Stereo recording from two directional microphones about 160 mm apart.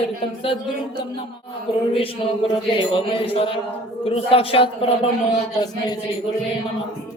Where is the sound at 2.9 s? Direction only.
35° left (ahead or behind).